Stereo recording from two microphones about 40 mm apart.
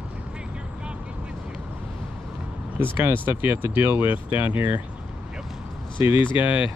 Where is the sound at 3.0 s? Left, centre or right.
Right.